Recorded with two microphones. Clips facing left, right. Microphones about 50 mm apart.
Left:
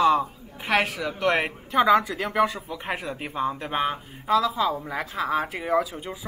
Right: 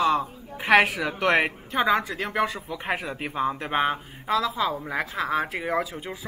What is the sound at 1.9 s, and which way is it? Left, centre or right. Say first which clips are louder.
Speech: left 4 dB; right.